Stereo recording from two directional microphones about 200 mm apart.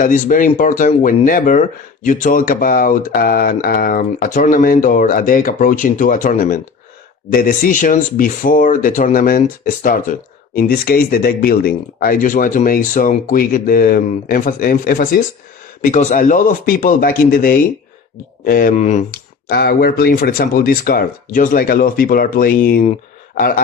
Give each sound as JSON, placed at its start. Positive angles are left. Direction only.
{"t": 0.0, "sound": "speech", "side_deg": 40}
{"t": 19.5, "sound": "speech", "side_deg": 50}
{"t": 22.8, "sound": "a sound", "side_deg": 35}